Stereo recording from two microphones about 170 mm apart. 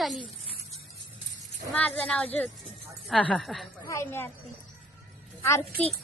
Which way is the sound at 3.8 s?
15° left (ahead or behind).